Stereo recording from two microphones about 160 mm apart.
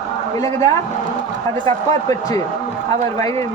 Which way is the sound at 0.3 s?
20° left (ahead or behind).